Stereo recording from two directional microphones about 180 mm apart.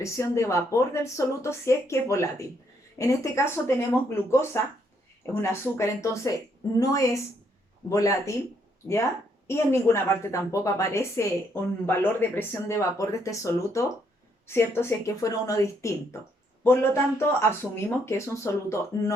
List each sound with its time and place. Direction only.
0.0 s a woman's voice: 15° left (ahead or behind)